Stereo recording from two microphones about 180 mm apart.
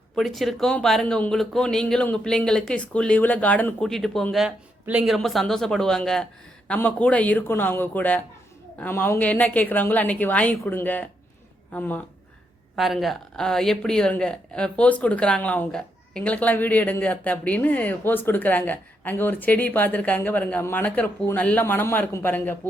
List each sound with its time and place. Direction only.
0.2 s speech: centre (ahead or behind)